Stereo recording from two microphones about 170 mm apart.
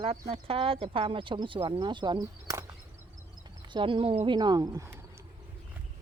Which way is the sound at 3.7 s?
30° right (ahead or behind).